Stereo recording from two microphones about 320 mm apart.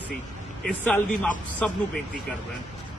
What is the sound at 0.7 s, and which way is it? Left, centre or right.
Speech, centre.